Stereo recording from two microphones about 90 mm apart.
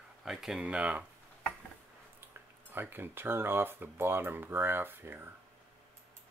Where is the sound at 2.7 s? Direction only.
25° right (ahead or behind).